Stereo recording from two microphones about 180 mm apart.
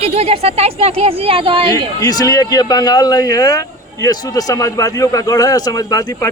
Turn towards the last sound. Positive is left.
turn(degrees=20)  # may be behind; listen again after turning